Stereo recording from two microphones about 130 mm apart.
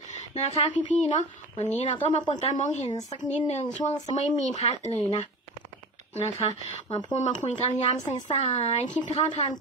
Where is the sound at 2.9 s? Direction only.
30° left (ahead or behind).